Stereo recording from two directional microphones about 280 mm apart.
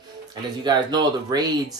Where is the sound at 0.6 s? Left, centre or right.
Centre.